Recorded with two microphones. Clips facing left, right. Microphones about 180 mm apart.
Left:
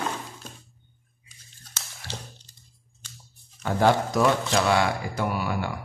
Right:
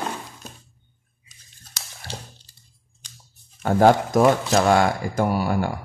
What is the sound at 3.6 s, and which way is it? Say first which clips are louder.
Speech: right 5 dB; 45° right (ahead or behind).